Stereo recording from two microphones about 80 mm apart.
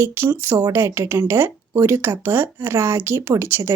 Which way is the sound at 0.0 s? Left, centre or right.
Right.